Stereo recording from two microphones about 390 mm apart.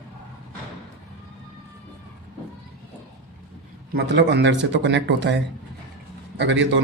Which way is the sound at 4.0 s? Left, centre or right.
Right.